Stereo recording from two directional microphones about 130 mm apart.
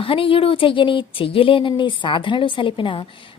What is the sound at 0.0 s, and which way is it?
Speech, 45° left (ahead or behind).